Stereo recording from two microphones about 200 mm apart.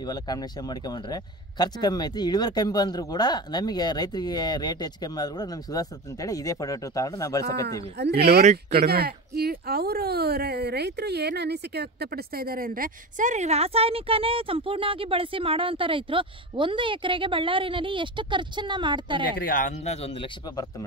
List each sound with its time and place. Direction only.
0.0 s speech: 20° left (ahead or behind)
8.0 s speech: 55° right (ahead or behind); by 19.2 s 25° right (ahead or behind)
19.3 s speech: 45° left (ahead or behind); by 20.6 s 25° left (ahead or behind)